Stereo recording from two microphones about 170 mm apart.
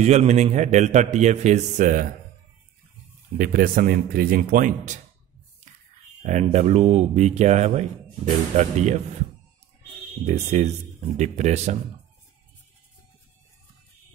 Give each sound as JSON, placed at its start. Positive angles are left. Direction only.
{"t": 0.0, "sound": "a man's voice", "side_deg": -40}
{"t": 3.3, "sound": "speech", "side_deg": -55}
{"t": 6.2, "sound": "speech", "side_deg": -40}
{"t": 10.2, "sound": "a man's voice", "side_deg": -40}